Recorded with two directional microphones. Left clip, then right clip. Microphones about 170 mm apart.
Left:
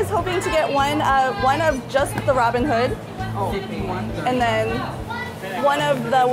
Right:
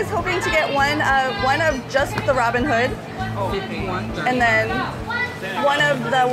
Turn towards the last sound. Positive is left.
turn(degrees=10)  # may be behind; listen again after turning